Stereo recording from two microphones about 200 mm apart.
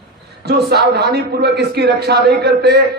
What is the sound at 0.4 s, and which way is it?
A man's voice, 55° right (ahead or behind).